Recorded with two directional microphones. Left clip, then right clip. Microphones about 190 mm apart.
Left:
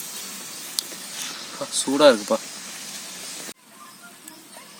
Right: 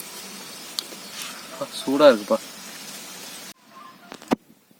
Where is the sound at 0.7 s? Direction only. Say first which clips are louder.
Left 1 dB; 5° right (ahead or behind).